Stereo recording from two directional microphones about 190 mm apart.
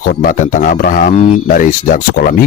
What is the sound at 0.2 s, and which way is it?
Speech, 45° left (ahead or behind).